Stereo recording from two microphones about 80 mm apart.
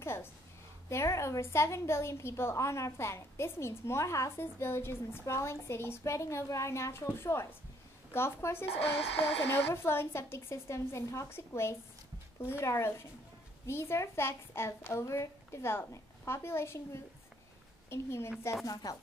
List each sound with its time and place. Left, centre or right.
0.0 s a woman's voice: left
18.7 s speech: left